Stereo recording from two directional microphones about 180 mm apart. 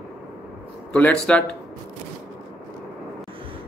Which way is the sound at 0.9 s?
5° left (ahead or behind).